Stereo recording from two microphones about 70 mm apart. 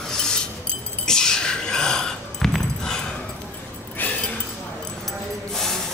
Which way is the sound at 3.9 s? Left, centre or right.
Left.